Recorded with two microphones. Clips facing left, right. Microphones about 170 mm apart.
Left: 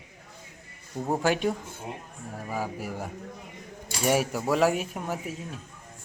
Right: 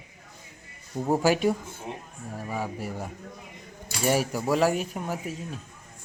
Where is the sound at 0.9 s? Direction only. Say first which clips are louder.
Right 3 dB; 5° right (ahead or behind).